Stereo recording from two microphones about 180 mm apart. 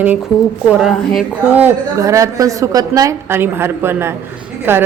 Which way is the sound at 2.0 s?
20° right (ahead or behind).